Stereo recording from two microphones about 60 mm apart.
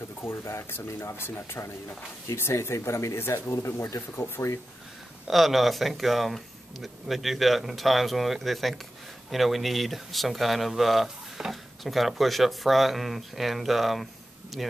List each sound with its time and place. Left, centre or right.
0.2 s speech: left
3.2 s speech: left
5.3 s speech: centre